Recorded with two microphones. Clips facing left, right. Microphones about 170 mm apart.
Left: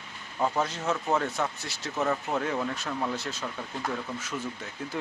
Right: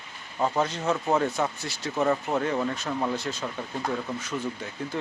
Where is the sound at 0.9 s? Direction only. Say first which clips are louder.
Right 3 dB; 10° right (ahead or behind).